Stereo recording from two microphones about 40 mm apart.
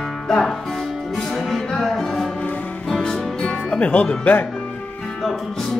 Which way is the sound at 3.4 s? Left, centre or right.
Left.